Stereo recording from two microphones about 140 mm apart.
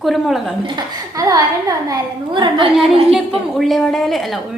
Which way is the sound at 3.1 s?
Centre (ahead or behind).